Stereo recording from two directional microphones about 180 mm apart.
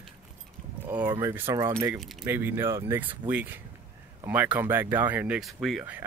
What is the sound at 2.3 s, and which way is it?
Speech, 10° right (ahead or behind).